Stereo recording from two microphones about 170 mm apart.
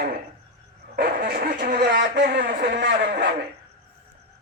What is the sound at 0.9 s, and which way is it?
Speech, 55° right (ahead or behind).